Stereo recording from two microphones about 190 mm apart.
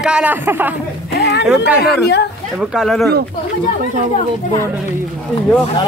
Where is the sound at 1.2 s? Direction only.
60° left (ahead or behind).